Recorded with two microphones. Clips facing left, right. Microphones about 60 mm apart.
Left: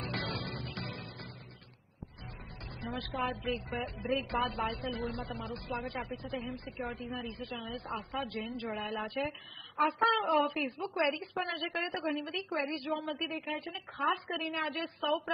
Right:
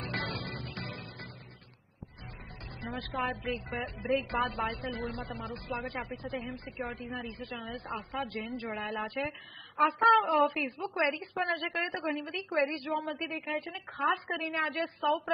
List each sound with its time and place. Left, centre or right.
0.0 s music: right
2.8 s a woman's voice: right